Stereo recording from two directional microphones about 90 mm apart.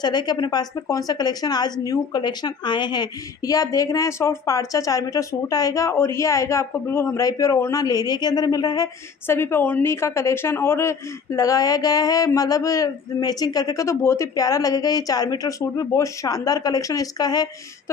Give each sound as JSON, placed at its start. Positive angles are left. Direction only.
{"t": 0.0, "sound": "a woman's voice", "side_deg": 50}
{"t": 7.8, "sound": "a woman's voice", "side_deg": 45}
{"t": 9.3, "sound": "a woman's voice", "side_deg": 25}